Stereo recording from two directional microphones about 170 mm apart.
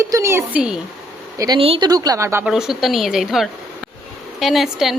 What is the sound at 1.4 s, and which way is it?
Speech, 25° right (ahead or behind).